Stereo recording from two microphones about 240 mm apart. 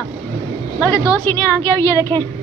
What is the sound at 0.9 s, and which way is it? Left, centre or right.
A woman's voice, centre.